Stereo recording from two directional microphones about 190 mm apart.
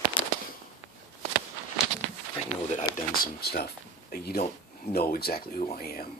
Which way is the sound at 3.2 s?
55° left (ahead or behind).